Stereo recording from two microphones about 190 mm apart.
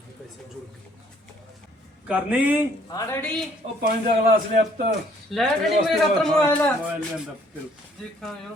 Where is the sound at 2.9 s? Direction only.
10° left (ahead or behind).